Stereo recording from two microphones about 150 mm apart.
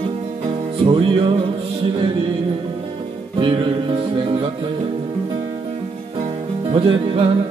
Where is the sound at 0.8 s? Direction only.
35° right (ahead or behind).